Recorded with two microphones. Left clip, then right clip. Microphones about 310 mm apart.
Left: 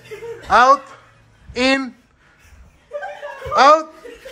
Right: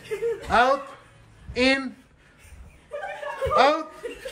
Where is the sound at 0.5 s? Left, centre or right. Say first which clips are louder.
Left 9 dB; centre.